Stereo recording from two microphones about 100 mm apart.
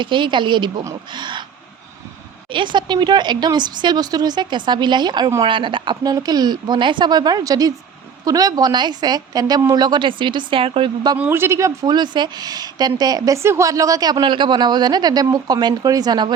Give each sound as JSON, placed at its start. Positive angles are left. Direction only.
{"t": 0.0, "sound": "a woman's voice", "side_deg": -55}
{"t": 2.5, "sound": "a woman's voice", "side_deg": -55}
{"t": 5.4, "sound": "a woman's voice", "side_deg": -55}
{"t": 11.3, "sound": "speech", "side_deg": -25}
{"t": 11.9, "sound": "a woman's voice", "side_deg": -45}